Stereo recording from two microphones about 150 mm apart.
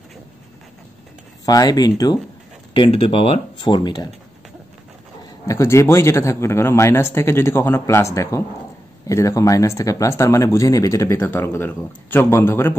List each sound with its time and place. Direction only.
1.4 s speech: 25° left (ahead or behind)
5.5 s speech: 20° left (ahead or behind)